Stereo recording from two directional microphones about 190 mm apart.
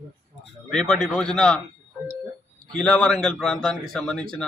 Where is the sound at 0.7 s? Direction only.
Centre (ahead or behind).